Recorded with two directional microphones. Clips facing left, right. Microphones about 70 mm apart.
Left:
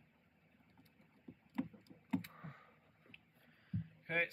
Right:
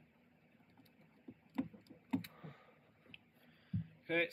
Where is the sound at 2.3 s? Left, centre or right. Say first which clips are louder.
Left 1 dB; left.